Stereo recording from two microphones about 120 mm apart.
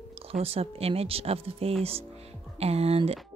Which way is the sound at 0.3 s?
55° right (ahead or behind).